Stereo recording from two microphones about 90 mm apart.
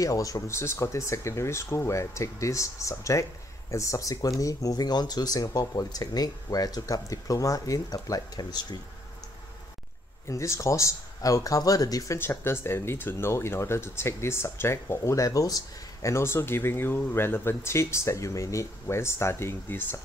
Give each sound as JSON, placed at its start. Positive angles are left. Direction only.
{"t": 0.0, "sound": "speech", "side_deg": 40}
{"t": 10.2, "sound": "speech", "side_deg": 35}
{"t": 12.2, "sound": "speech", "side_deg": 25}